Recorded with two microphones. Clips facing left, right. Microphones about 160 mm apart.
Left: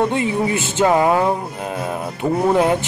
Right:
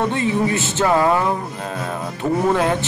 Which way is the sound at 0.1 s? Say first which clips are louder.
Even; 15° left (ahead or behind).